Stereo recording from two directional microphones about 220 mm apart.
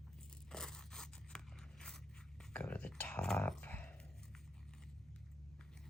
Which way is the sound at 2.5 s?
5° left (ahead or behind).